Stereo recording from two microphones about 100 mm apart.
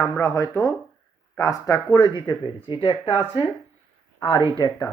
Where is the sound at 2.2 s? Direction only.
50° left (ahead or behind).